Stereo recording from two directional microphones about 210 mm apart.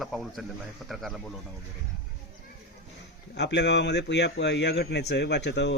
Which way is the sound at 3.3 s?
55° left (ahead or behind).